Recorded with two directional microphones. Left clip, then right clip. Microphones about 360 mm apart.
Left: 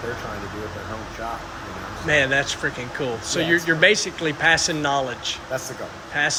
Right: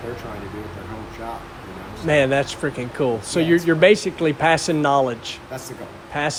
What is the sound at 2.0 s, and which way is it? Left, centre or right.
Speech, centre.